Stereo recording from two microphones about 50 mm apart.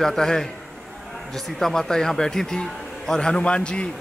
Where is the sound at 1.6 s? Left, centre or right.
Centre.